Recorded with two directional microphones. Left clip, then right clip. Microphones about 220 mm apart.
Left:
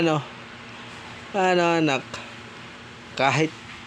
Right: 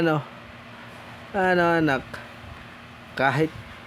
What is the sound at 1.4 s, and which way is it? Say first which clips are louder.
Speech: even; 15° right (ahead or behind).